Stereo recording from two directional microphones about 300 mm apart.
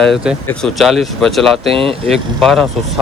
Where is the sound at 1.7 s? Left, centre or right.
Centre.